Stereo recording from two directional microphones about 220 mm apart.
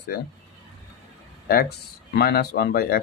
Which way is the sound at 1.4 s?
45° left (ahead or behind).